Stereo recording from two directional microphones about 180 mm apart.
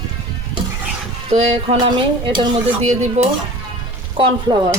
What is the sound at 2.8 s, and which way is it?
Speech, 40° right (ahead or behind).